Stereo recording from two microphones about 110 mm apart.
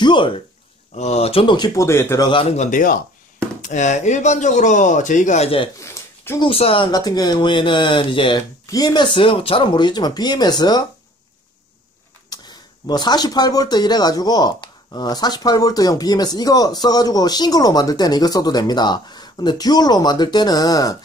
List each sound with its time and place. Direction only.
0.0 s speech: 45° left (ahead or behind)
0.9 s speech: 85° left
1.4 s speech: 45° left (ahead or behind)
1.7 s speech: 25° left (ahead or behind)
2.1 s speech: 45° left (ahead or behind)
3.7 s speech: 90° left
5.3 s speech: 75° left (ahead or behind)
5.8 s a sound: 25° left (ahead or behind)
6.4 s speech: 55° left (ahead or behind)
6.9 s speech: 40° left (ahead or behind)
8.6 s speech: 35° left (ahead or behind)
12.3 s speech: 40° left (ahead or behind)